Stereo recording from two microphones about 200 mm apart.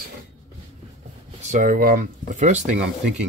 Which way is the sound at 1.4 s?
40° right (ahead or behind).